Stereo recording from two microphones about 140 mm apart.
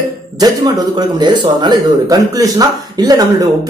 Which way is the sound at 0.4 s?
30° right (ahead or behind).